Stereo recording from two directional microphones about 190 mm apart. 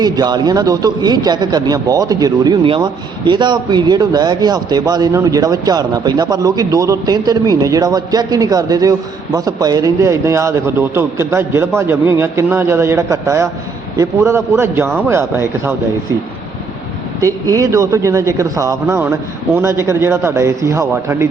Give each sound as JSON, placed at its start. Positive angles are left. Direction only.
{"t": 0.0, "sound": "a man's voice", "side_deg": -20}
{"t": 17.2, "sound": "a man's voice", "side_deg": -15}